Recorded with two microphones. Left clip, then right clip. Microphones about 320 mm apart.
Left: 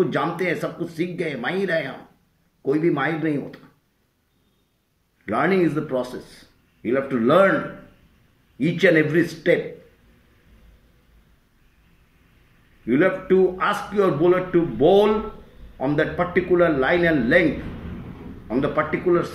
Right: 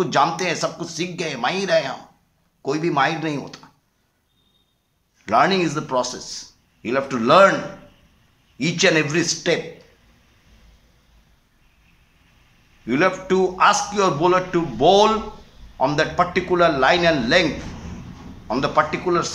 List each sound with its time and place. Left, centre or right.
0.0 s speech: right
5.2 s speech: right
8.5 s speech: right
12.8 s speech: right
18.9 s speech: right